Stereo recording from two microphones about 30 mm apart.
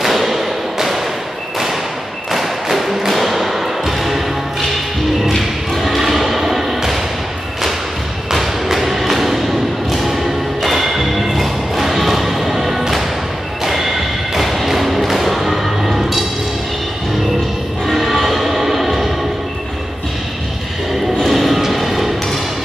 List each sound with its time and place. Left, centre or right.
0.0 s thump: centre
2.3 s music: centre
5.4 s thump: centre
8.3 s thump: centre
9.8 s music: centre
17.9 s train: centre
21.2 s music: centre